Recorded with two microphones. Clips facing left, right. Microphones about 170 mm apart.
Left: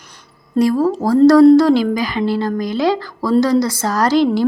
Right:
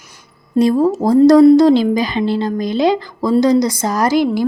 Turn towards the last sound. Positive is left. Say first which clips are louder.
# even
turn(degrees=-10)  # may be behind; listen again after turning